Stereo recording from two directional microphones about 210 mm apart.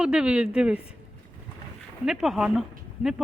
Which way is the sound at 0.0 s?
5° right (ahead or behind).